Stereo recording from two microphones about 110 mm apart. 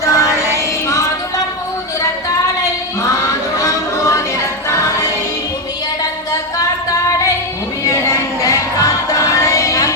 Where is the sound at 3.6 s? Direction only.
30° left (ahead or behind).